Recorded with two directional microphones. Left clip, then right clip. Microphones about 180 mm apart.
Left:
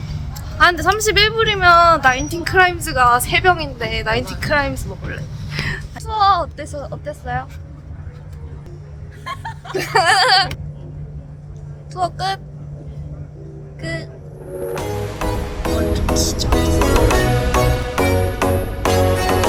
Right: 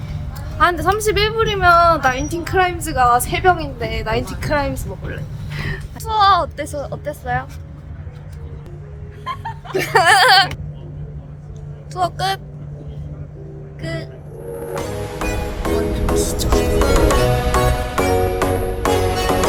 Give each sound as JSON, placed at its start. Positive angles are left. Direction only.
{"t": 0.6, "sound": "a woman's voice", "side_deg": -10}
{"t": 6.1, "sound": "speech", "side_deg": -30}
{"t": 9.2, "sound": "laughter", "side_deg": 55}
{"t": 9.7, "sound": "speech", "side_deg": -15}
{"t": 11.9, "sound": "speech", "side_deg": -15}
{"t": 13.8, "sound": "speech", "side_deg": 10}
{"t": 14.8, "sound": "music", "side_deg": 0}
{"t": 16.1, "sound": "music", "side_deg": -15}
{"t": 16.5, "sound": "music", "side_deg": 0}